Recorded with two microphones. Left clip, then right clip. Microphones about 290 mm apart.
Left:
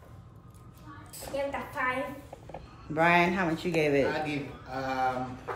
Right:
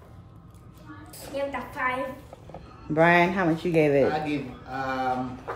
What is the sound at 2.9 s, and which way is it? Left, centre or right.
A woman's voice, right.